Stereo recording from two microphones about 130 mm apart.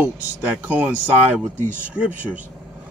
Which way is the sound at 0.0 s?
15° right (ahead or behind).